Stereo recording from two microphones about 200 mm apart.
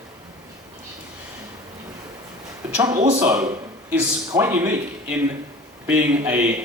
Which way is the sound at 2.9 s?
40° right (ahead or behind).